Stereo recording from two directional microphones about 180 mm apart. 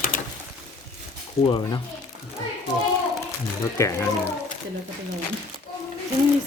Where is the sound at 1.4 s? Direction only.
25° left (ahead or behind).